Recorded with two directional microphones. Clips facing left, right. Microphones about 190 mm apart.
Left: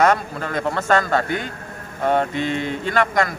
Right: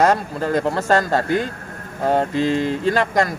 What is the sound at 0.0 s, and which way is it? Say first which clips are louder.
Speech: right 1 dB; 35° right (ahead or behind).